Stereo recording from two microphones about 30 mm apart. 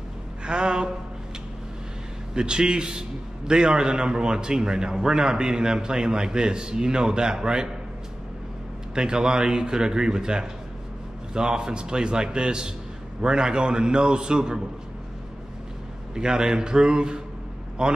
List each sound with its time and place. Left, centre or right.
0.4 s a sound: right
2.3 s a man's voice: right
8.9 s a man's voice: right
16.2 s a man's voice: right